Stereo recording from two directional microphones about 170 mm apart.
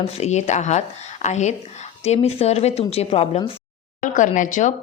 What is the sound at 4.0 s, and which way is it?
Speech, 50° left (ahead or behind).